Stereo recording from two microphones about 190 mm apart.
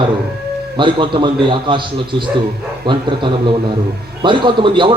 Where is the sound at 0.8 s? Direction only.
25° right (ahead or behind).